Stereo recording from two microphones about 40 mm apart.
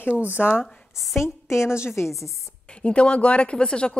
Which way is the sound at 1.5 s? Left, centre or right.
Left.